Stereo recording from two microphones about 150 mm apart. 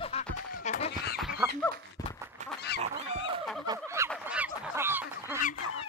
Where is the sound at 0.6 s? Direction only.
50° left (ahead or behind).